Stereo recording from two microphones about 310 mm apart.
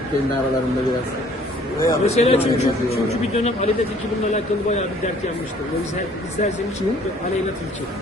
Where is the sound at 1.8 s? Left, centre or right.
Centre.